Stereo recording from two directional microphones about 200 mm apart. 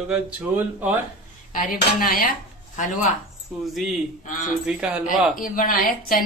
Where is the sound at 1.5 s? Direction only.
40° left (ahead or behind).